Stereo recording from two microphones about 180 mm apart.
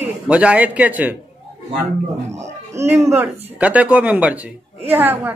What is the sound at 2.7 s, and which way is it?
A man's voice, 15° right (ahead or behind).